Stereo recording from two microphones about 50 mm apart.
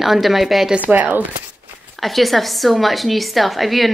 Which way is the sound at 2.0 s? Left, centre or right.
Centre.